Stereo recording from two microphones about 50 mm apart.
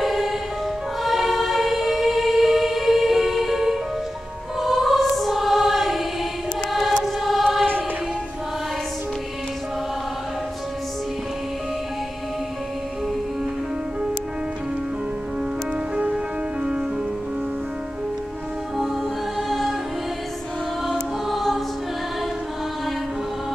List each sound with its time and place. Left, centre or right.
0.0 s music: centre
4.6 s choir: centre
21.3 s choir: centre